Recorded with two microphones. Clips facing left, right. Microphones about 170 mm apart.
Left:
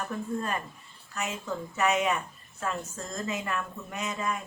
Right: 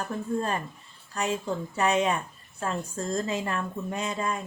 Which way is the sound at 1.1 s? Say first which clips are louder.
Right 5 dB; 30° right (ahead or behind).